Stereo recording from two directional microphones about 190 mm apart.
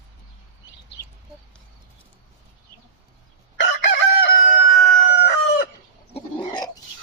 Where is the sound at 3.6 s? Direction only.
65° left (ahead or behind).